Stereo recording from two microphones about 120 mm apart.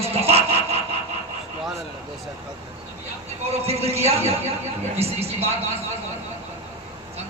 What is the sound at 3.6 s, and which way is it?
Speech, 60° right (ahead or behind).